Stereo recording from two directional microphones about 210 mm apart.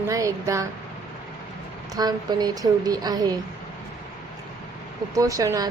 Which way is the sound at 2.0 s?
20° right (ahead or behind).